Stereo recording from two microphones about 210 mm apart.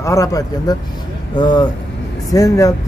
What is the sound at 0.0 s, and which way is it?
Speech, 15° left (ahead or behind).